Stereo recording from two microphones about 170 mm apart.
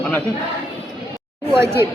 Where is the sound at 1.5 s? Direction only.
15° right (ahead or behind).